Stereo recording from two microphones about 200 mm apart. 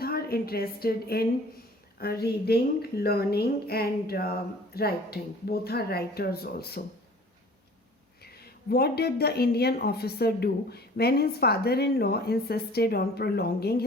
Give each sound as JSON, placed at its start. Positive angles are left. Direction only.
{"t": 0.0, "sound": "a woman's voice", "side_deg": 50}
{"t": 8.2, "sound": "a woman's voice", "side_deg": 50}